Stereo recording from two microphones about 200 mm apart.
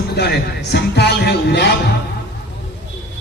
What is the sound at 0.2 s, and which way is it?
A man's voice, 55° left (ahead or behind).